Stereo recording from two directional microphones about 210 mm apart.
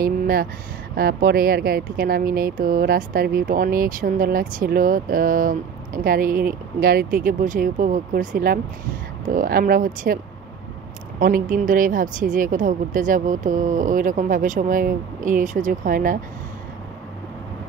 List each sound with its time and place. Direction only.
0.0 s speech: 45° right (ahead or behind)
11.1 s speech: 45° right (ahead or behind)